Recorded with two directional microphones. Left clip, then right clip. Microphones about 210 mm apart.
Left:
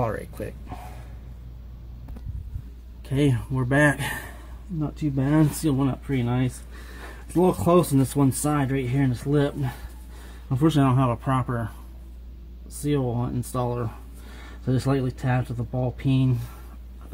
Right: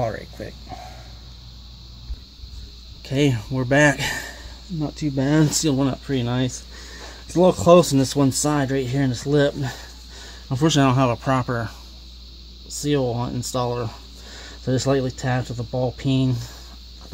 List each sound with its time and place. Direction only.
0.0 s speech: centre (ahead or behind)
3.1 s speech: 30° right (ahead or behind)
12.8 s speech: 40° right (ahead or behind)